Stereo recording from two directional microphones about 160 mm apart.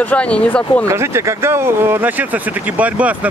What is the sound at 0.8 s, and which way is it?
Speech, 15° right (ahead or behind).